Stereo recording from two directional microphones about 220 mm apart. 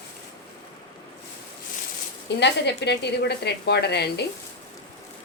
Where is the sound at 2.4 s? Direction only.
50° left (ahead or behind).